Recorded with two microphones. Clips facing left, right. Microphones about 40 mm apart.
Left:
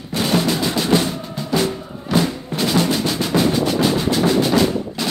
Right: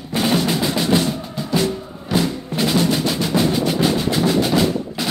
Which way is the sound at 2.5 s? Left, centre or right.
Left.